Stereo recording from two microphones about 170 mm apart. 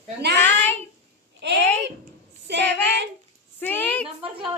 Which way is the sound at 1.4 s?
90° right.